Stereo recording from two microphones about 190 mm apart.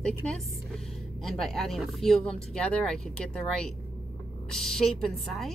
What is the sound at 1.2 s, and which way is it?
Speech, centre (ahead or behind).